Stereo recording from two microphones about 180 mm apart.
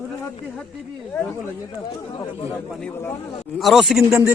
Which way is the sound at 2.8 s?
15° left (ahead or behind).